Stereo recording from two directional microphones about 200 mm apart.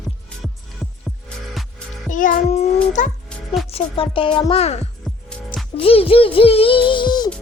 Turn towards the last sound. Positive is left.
turn(degrees=20)  # may be behind; listen again after turning